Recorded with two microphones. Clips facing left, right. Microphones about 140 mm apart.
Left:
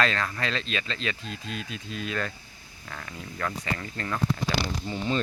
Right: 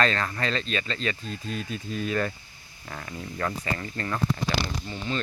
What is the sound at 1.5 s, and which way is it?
Speech, 90° left.